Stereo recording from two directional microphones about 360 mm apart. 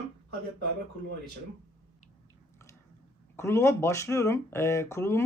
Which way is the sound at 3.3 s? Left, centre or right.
Centre.